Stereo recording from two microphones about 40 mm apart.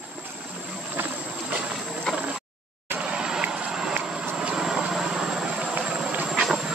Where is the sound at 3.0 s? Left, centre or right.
Centre.